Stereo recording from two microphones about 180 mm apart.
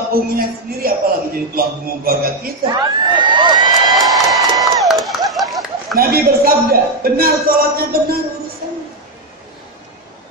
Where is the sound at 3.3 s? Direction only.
25° right (ahead or behind).